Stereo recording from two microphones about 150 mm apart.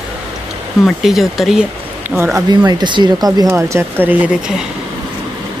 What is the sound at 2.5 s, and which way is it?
Speech, 30° right (ahead or behind).